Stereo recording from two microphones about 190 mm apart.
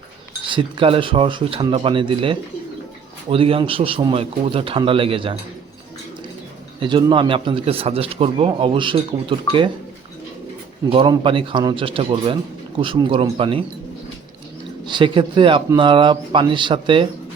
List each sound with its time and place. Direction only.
0.5 s speech: 25° right (ahead or behind)
6.7 s speech: 25° right (ahead or behind)
10.8 s speech: 25° right (ahead or behind)
14.8 s speech: 25° right (ahead or behind)